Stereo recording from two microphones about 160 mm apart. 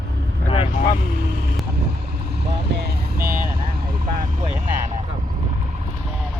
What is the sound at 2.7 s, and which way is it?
Speech, 90° right.